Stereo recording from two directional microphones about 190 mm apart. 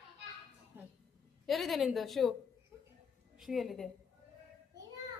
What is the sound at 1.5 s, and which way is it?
Speech, centre (ahead or behind).